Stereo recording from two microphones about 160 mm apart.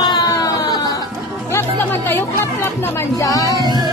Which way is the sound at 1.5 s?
15° left (ahead or behind).